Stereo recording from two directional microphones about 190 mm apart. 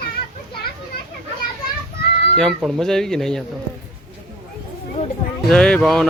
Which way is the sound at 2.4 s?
5° left (ahead or behind).